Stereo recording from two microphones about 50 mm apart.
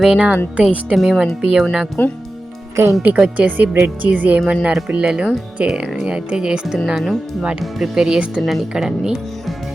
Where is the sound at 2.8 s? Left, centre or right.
Right.